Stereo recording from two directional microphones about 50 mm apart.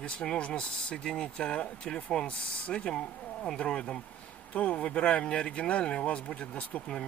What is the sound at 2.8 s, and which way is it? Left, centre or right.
Speech, centre.